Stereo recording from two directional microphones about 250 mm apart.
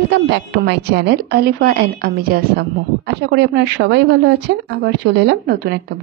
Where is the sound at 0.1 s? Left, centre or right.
Right.